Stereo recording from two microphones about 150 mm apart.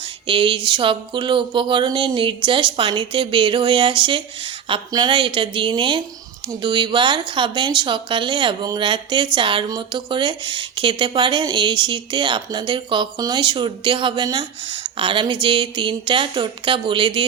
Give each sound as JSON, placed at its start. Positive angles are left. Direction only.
{"t": 0.3, "sound": "speech", "side_deg": -35}